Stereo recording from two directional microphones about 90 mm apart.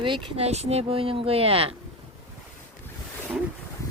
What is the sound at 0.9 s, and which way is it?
Speech, 90° right.